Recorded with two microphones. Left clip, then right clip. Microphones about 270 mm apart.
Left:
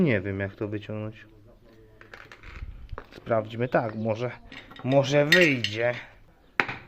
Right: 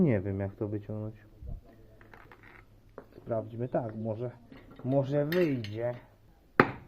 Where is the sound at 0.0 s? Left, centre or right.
Centre.